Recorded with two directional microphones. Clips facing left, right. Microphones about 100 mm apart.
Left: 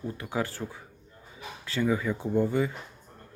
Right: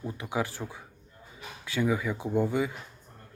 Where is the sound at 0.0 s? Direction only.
15° right (ahead or behind).